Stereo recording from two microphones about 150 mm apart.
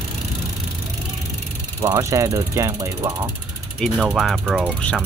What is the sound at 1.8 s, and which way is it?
Speech, 20° right (ahead or behind).